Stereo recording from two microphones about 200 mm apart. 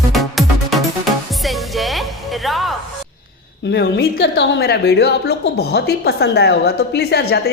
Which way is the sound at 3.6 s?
60° left (ahead or behind).